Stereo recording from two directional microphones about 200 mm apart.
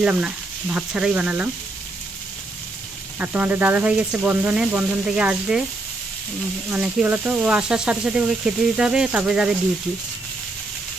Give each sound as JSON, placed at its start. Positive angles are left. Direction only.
{"t": 0.0, "sound": "speech", "side_deg": -5}
{"t": 3.2, "sound": "speech", "side_deg": -10}
{"t": 6.7, "sound": "speech", "side_deg": -5}